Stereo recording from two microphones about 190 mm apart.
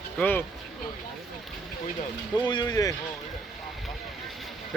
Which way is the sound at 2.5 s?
20° left (ahead or behind).